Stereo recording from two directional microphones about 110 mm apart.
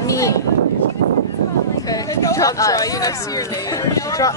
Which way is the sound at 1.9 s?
30° left (ahead or behind).